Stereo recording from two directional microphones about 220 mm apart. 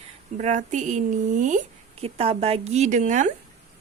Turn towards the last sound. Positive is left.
turn(degrees=-35)  # may be behind; listen again after turning